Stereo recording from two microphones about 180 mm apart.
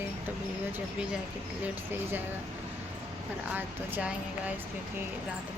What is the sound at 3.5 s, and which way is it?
Speech, 10° right (ahead or behind).